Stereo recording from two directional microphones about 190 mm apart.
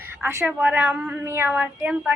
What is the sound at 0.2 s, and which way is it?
A woman's voice, 10° right (ahead or behind).